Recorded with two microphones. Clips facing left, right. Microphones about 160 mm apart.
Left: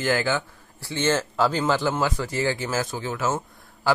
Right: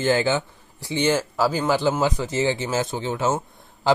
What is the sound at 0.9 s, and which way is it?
Speech, 15° right (ahead or behind).